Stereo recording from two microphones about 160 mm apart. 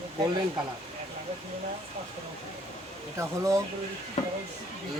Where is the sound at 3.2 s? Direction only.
20° right (ahead or behind).